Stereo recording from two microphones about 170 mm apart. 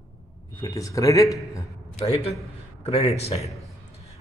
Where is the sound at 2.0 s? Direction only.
35° left (ahead or behind).